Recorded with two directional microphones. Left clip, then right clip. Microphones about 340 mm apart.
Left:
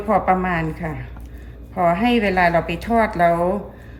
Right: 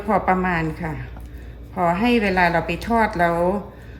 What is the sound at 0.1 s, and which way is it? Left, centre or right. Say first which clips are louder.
A woman's voice: left 1 dB; centre.